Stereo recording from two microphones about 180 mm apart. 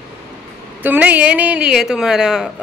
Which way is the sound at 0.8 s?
10° right (ahead or behind).